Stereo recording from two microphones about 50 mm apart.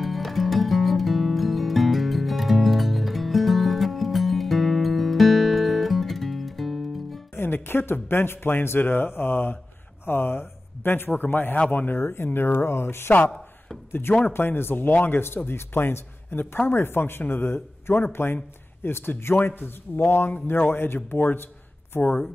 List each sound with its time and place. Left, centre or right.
0.0 s music: centre
7.3 s speech: left
14.2 s speech: left